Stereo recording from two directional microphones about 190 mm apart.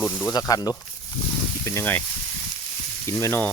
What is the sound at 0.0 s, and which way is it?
Speech, 10° left (ahead or behind).